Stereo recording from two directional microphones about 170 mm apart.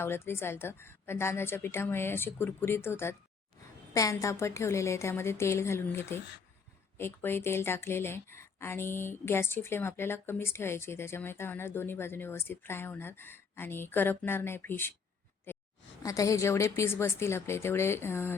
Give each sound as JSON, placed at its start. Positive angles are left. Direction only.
{"t": 0.0, "sound": "speech", "side_deg": 15}
{"t": 15.5, "sound": "a sound", "side_deg": 15}
{"t": 16.0, "sound": "speech", "side_deg": 20}